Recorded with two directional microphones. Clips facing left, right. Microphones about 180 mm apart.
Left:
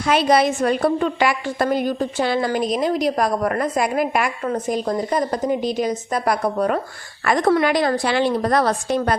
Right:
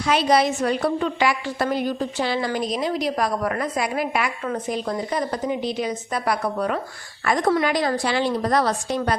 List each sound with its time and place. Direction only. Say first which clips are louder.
0.0 s a woman's voice: left 2 dB; 55° left (ahead or behind)
7.3 s a woman's voice: left 3 dB; 65° left (ahead or behind)